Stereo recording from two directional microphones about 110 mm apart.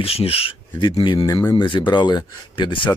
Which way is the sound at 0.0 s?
60° left (ahead or behind).